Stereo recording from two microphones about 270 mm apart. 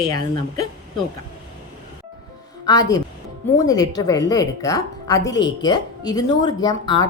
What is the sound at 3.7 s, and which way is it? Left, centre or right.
A woman's voice, centre.